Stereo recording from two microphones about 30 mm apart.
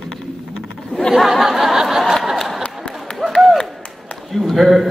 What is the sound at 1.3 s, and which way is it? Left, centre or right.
Snicker, centre.